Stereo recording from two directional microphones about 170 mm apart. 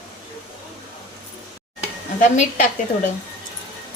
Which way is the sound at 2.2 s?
50° left (ahead or behind).